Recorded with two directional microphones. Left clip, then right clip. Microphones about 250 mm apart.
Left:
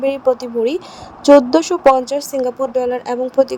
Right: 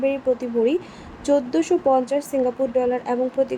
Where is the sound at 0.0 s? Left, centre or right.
Left.